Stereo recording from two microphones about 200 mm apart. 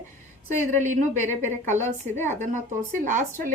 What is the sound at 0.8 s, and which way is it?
Speech, 40° right (ahead or behind).